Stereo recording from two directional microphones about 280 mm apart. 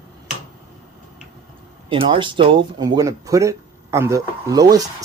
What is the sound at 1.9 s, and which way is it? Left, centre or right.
Speech, centre.